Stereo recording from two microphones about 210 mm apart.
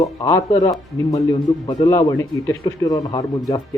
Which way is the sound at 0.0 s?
15° left (ahead or behind).